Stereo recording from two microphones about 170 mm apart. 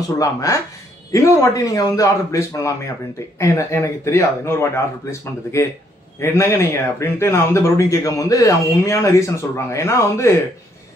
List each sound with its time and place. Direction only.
0.2 s a man's voice: 20° left (ahead or behind)